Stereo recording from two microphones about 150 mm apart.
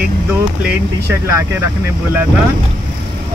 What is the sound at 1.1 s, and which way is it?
Speech, 20° right (ahead or behind).